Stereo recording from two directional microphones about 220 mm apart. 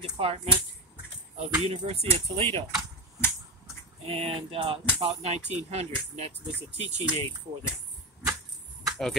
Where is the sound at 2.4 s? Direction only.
25° right (ahead or behind).